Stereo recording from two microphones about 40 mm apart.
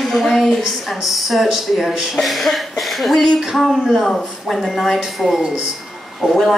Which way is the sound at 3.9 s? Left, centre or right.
Centre.